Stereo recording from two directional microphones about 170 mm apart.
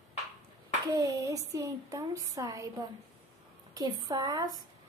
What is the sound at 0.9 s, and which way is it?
A woman's voice, 20° right (ahead or behind).